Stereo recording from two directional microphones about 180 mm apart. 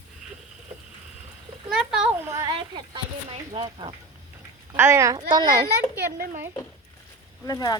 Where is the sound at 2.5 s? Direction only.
30° right (ahead or behind).